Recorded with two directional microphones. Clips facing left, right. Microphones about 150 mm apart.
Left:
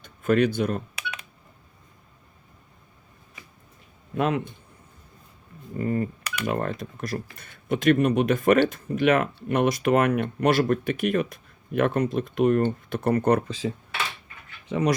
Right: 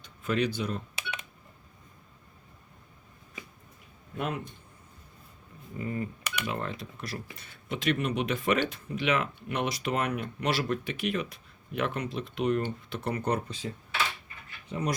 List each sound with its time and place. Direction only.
0.0 s speech: 50° left (ahead or behind)
1.0 s telephone dialing: 25° right (ahead or behind)
4.2 s speech: 90° left
5.8 s speech: 50° left (ahead or behind); by 13.7 s 75° left (ahead or behind)
14.7 s speech: 90° left